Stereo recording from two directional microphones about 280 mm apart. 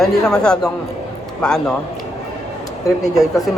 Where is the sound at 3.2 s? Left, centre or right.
Centre.